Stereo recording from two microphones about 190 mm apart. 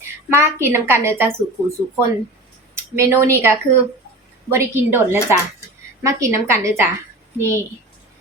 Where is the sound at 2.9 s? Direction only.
15° right (ahead or behind).